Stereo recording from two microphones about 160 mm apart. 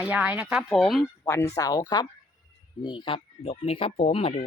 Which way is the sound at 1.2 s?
15° left (ahead or behind).